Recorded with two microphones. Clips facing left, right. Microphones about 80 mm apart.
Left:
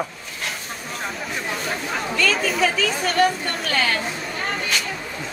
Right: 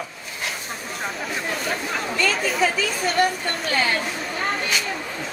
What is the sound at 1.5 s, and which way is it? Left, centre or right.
A woman's voice, centre.